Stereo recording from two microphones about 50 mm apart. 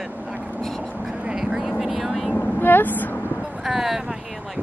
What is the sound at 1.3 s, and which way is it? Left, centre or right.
Vehicle, centre.